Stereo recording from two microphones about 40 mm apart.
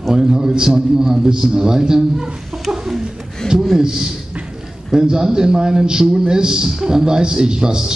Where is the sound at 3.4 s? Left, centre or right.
Left.